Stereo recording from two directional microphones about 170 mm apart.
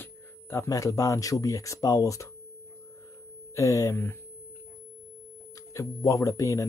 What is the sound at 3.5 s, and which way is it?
Speech, 20° left (ahead or behind).